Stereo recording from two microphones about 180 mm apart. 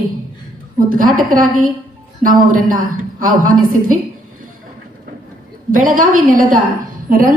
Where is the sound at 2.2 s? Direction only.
50° right (ahead or behind).